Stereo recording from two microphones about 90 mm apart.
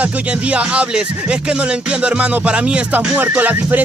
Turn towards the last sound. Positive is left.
turn(degrees=-20)  # may be behind; listen again after turning